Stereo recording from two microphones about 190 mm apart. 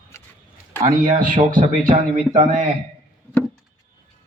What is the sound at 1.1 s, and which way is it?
Speech, 45° right (ahead or behind).